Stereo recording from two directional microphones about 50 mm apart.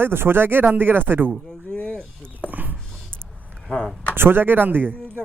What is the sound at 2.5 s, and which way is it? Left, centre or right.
Dog, right.